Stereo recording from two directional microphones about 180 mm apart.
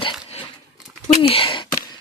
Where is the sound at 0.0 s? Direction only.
30° left (ahead or behind).